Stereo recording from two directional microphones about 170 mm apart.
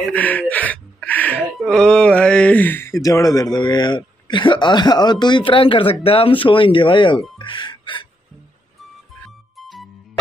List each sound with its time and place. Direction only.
0.0 s gasp: 10° left (ahead or behind)
3.5 s a man's voice: 25° left (ahead or behind)
7.3 s music: 30° left (ahead or behind)
9.6 s music: centre (ahead or behind)